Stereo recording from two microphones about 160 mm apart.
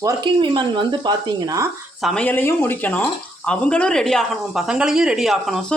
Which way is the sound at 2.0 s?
5° left (ahead or behind).